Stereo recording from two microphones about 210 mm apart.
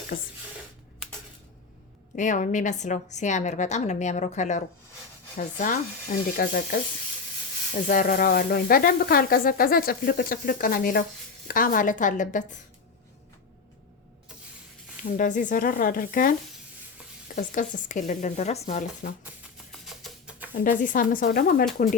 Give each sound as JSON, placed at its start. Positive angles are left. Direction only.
{"t": 2.1, "sound": "a woman's voice", "side_deg": 35}
{"t": 15.2, "sound": "a woman's voice", "side_deg": 35}
{"t": 17.3, "sound": "a woman's voice", "side_deg": 35}
{"t": 19.7, "sound": "music", "side_deg": 0}
{"t": 20.5, "sound": "a woman's voice", "side_deg": 40}